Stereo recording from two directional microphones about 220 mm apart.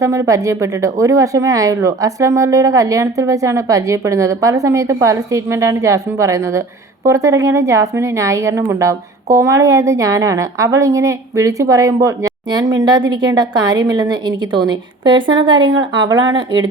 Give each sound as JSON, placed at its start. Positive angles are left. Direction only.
{"t": 0.0, "sound": "a woman's voice", "side_deg": -15}